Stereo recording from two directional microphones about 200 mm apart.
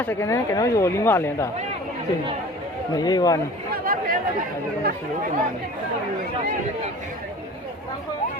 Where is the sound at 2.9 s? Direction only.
20° left (ahead or behind).